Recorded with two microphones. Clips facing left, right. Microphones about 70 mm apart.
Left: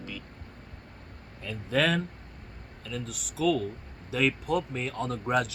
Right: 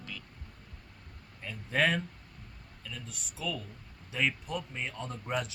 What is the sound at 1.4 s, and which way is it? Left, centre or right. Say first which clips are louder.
Speech: left 3 dB; left.